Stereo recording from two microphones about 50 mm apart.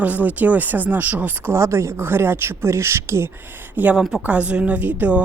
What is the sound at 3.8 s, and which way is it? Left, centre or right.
Speech, right.